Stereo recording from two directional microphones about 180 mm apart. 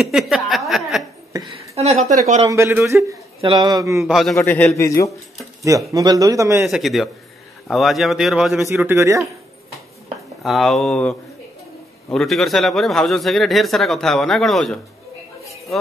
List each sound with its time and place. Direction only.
0.0 s a sound: centre (ahead or behind)
2.4 s speech: 15° right (ahead or behind)
3.3 s speech: 25° right (ahead or behind)
4.0 s a man's voice: centre (ahead or behind); by 5.1 s 15° left (ahead or behind)
5.9 s speech: 20° right (ahead or behind)
6.6 s a man's voice: centre (ahead or behind)
8.6 s speech: 15° right (ahead or behind)
10.4 s a man's voice: centre (ahead or behind)